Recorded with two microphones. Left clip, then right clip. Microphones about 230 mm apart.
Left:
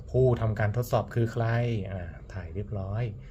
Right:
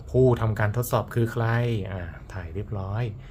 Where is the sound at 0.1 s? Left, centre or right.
Centre.